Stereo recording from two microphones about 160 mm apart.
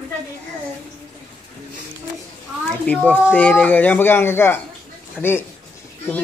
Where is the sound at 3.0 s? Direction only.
10° left (ahead or behind).